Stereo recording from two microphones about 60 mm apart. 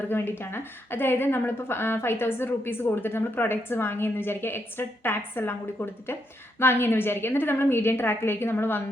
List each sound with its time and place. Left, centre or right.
0.1 s a woman's voice: left